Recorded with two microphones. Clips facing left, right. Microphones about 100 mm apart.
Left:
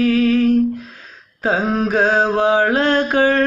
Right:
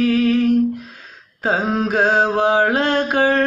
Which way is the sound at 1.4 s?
20° right (ahead or behind).